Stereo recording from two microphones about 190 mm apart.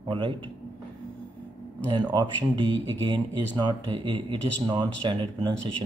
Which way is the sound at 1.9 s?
25° right (ahead or behind).